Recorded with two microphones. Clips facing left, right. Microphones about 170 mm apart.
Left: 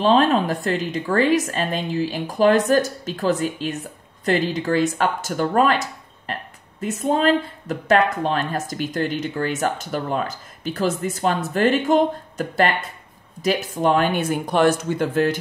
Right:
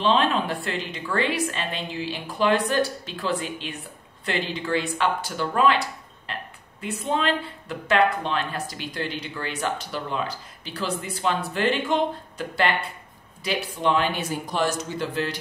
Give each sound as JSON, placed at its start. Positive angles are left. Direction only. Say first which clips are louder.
{"t": 0.0, "sound": "a woman's voice", "louder": "left 5 dB", "side_deg": 45}